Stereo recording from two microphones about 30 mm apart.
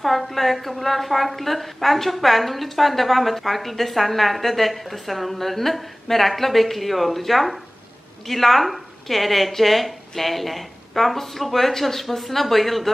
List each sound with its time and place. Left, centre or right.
0.0 s a woman's voice: centre